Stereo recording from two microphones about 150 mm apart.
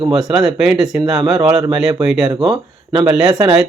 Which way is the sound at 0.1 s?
5° right (ahead or behind).